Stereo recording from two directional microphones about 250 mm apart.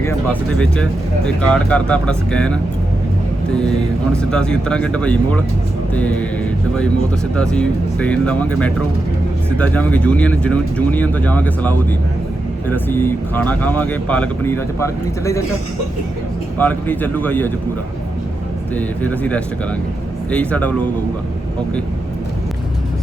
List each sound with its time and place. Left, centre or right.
0.0 s speech: centre
7.3 s speech: centre
16.6 s speech: centre
18.7 s speech: centre